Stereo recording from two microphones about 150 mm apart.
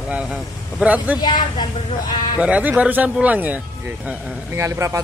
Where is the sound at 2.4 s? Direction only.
10° right (ahead or behind).